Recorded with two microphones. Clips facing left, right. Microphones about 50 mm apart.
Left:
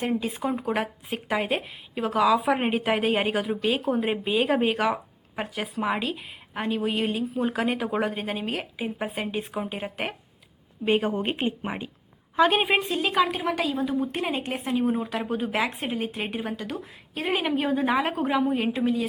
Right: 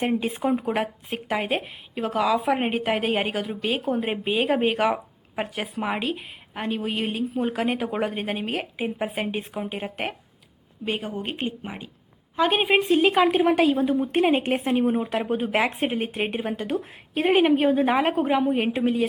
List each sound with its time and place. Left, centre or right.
0.0 s speech: right
0.7 s a woman's voice: centre
3.6 s speech: centre
3.8 s a woman's voice: centre
4.1 s a woman's voice: centre
10.8 s speech: left
12.4 s a woman's voice: centre
12.9 s a woman's voice: right
14.8 s speech: centre